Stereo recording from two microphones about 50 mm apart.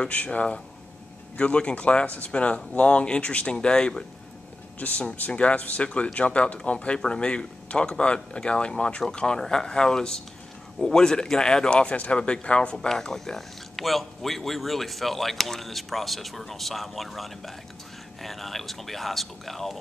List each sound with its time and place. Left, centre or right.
0.0 s speech: left
4.7 s speech: left
12.7 s speech: centre